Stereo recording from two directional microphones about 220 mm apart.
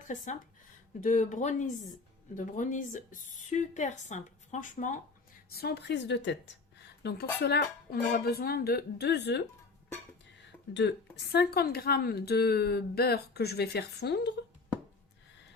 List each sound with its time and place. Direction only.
1.0 s speech: 35° left (ahead or behind)
5.5 s speech: 45° left (ahead or behind)
10.8 s speech: 50° left (ahead or behind)